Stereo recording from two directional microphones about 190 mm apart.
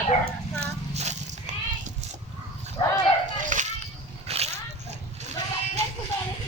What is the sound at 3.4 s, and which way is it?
Children playing, 40° right (ahead or behind).